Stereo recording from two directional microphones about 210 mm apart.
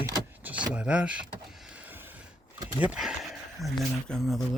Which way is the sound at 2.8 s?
5° right (ahead or behind).